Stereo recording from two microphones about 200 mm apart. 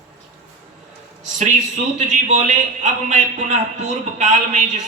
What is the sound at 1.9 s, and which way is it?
A man's voice, 40° right (ahead or behind).